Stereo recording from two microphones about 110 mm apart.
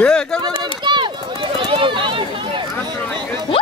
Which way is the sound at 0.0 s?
5° left (ahead or behind).